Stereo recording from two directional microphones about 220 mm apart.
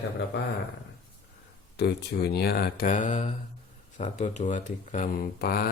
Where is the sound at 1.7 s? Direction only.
50° left (ahead or behind).